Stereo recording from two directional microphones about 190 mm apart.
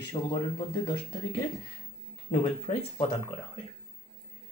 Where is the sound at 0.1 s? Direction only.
25° left (ahead or behind).